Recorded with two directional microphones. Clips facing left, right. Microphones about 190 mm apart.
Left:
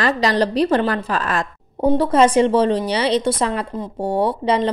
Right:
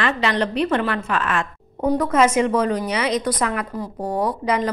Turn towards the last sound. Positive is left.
turn(degrees=30)  # may be behind; listen again after turning